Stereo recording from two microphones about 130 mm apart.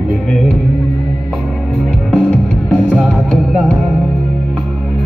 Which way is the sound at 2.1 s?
10° left (ahead or behind).